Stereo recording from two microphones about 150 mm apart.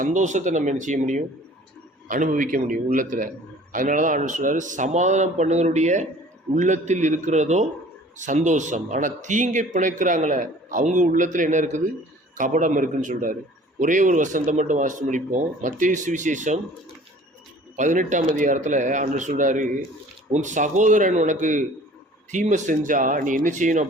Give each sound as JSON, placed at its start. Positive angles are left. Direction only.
{"t": 0.0, "sound": "speech", "side_deg": -55}
{"t": 17.7, "sound": "speech", "side_deg": -55}